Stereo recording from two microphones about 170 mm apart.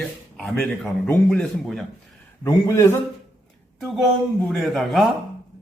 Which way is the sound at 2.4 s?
15° left (ahead or behind).